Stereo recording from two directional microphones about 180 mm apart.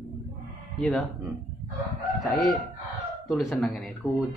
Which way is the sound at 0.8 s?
Centre (ahead or behind).